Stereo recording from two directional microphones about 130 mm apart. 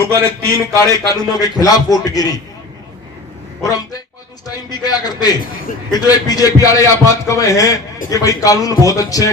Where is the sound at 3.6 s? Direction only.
30° left (ahead or behind).